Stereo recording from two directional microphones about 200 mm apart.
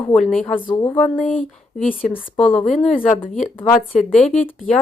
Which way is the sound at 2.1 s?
5° left (ahead or behind).